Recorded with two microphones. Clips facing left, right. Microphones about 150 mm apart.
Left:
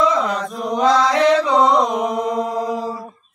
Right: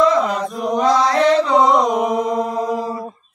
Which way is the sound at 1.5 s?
Centre (ahead or behind).